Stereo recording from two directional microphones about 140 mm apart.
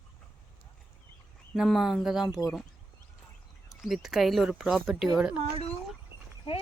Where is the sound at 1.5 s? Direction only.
Centre (ahead or behind).